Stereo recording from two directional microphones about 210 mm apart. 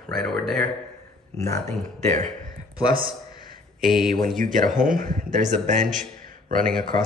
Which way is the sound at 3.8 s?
Centre (ahead or behind).